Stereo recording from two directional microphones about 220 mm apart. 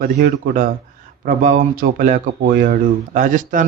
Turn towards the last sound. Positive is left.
turn(degrees=-35)  # may be behind; listen again after turning